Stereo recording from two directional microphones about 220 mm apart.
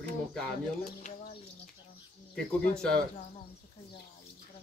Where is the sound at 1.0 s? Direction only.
30° left (ahead or behind).